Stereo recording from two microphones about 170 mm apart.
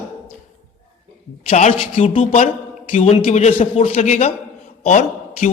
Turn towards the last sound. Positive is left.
turn(degrees=45)  # may be behind; listen again after turning